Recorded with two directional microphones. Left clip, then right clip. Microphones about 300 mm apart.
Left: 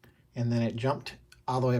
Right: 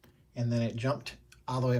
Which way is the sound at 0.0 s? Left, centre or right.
Centre.